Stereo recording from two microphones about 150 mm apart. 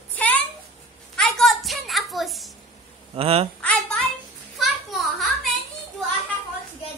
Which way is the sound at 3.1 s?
40° right (ahead or behind).